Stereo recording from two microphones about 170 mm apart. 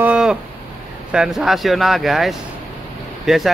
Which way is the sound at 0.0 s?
5° right (ahead or behind).